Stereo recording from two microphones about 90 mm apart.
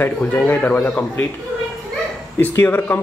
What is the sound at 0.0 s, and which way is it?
Speech, 20° left (ahead or behind).